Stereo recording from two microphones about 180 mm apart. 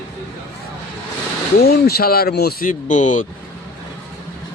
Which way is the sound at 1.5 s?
60° left (ahead or behind).